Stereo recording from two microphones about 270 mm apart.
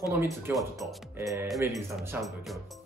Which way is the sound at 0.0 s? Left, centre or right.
Centre.